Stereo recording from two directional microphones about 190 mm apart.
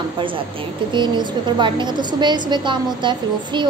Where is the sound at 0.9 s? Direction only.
25° right (ahead or behind).